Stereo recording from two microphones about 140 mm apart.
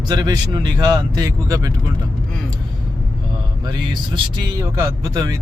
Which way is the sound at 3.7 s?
30° right (ahead or behind).